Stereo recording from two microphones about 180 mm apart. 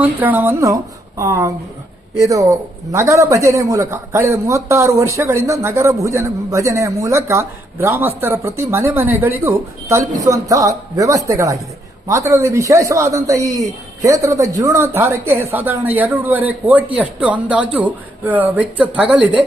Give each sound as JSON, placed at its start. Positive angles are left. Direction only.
{"t": 0.0, "sound": "speech", "side_deg": -10}